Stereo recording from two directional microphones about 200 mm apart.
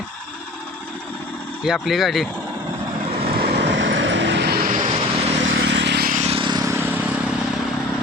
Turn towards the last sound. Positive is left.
turn(degrees=-10)  # may be behind; listen again after turning